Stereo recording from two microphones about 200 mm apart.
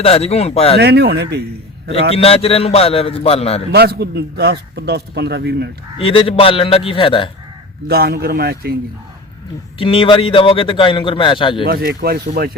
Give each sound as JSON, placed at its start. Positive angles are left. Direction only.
{"t": 0.0, "sound": "speech", "side_deg": 30}
{"t": 0.8, "sound": "speech", "side_deg": -55}
{"t": 2.1, "sound": "a man's voice", "side_deg": 30}
{"t": 3.7, "sound": "speech", "side_deg": -55}
{"t": 6.0, "sound": "a man's voice", "side_deg": 25}
{"t": 7.9, "sound": "speech", "side_deg": -50}
{"t": 9.7, "sound": "a man's voice", "side_deg": 25}
{"t": 11.6, "sound": "speech", "side_deg": -50}